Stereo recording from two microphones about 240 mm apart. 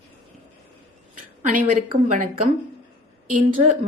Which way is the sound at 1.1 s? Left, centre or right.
Right.